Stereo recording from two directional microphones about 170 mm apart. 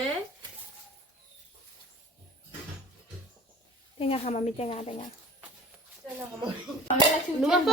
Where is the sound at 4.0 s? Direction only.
35° left (ahead or behind).